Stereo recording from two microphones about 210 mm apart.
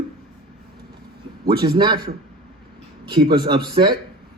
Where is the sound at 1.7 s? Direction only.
20° right (ahead or behind).